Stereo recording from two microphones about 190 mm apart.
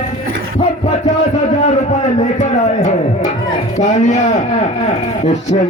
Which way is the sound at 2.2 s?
40° left (ahead or behind).